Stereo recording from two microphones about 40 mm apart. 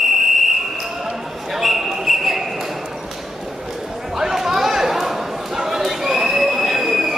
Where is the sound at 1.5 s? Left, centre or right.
Centre.